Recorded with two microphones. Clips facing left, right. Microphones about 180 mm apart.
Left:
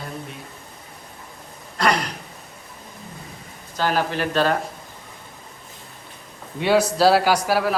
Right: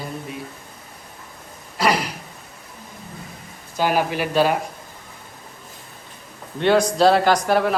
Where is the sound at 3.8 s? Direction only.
10° right (ahead or behind).